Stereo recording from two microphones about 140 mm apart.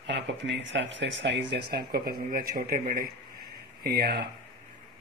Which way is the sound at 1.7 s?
90° right.